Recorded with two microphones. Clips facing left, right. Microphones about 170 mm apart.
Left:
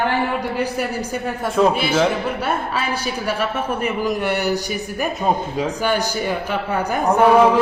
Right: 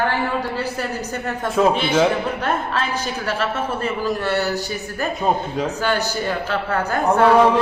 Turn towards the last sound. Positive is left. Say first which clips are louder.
# left 1 dB
turn(degrees=15)  # may be behind; listen again after turning